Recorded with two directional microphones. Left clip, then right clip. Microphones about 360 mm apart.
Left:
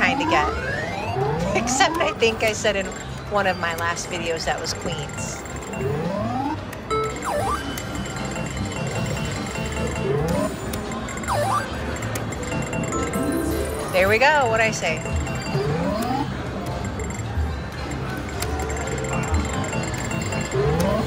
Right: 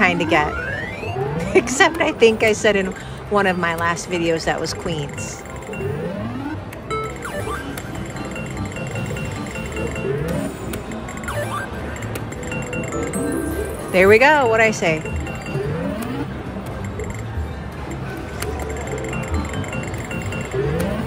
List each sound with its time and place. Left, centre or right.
0.0 s vehicle: centre
3.3 s speech: centre
13.9 s speech: centre